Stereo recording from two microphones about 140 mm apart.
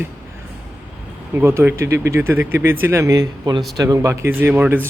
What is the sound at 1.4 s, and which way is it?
Speech, 15° right (ahead or behind).